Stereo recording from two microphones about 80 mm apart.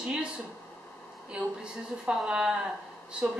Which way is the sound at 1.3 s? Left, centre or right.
Centre.